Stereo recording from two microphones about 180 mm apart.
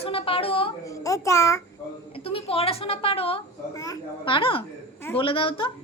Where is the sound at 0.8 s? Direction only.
20° left (ahead or behind).